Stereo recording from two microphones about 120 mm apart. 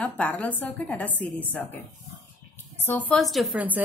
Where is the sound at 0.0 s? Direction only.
10° left (ahead or behind).